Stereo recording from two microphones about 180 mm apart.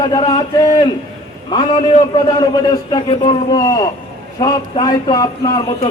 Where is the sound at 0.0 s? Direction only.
20° left (ahead or behind).